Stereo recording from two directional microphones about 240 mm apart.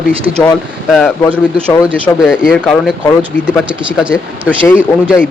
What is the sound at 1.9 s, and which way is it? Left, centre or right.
A man's voice, centre.